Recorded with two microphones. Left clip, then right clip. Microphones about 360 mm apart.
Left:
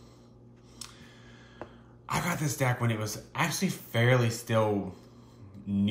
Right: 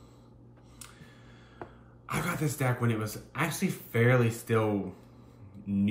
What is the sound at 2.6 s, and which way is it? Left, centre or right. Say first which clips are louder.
Speech: left 1 dB; centre.